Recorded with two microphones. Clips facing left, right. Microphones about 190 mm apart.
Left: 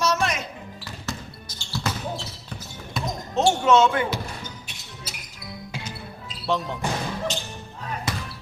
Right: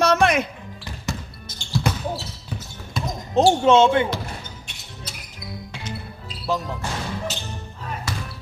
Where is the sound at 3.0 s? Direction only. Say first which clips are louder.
Right 1 dB; centre (ahead or behind).